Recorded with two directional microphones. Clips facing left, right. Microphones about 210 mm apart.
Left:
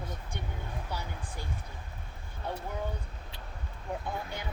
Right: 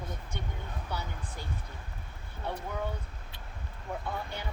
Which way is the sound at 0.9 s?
10° left (ahead or behind).